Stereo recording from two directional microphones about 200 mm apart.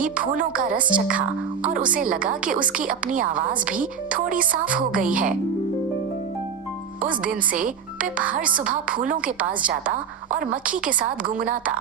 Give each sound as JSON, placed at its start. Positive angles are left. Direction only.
{"t": 0.9, "sound": "speech", "side_deg": -5}
{"t": 1.7, "sound": "a woman's voice", "side_deg": -40}
{"t": 4.9, "sound": "speech", "side_deg": -45}
{"t": 7.3, "sound": "a woman's voice", "side_deg": -40}